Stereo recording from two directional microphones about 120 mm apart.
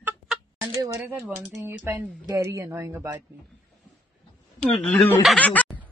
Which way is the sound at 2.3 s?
25° right (ahead or behind).